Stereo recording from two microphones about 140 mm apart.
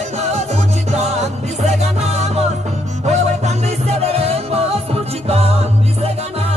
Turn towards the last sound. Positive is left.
turn(degrees=-45)  # may be behind; listen again after turning